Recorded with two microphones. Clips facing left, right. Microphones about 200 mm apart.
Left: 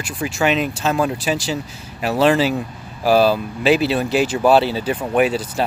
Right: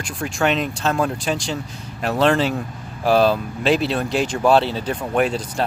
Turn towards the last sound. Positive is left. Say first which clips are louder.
# left 3 dB
turn(degrees=5)  # may be behind; listen again after turning